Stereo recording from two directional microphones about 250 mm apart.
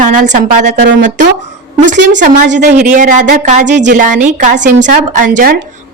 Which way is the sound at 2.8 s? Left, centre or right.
Right.